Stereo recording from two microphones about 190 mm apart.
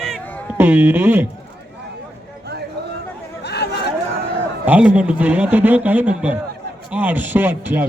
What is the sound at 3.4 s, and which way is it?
Chatter, 60° left (ahead or behind).